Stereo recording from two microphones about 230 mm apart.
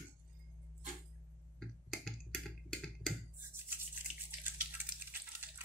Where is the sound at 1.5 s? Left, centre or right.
Centre.